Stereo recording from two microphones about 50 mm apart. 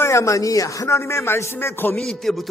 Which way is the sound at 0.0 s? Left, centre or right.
Left.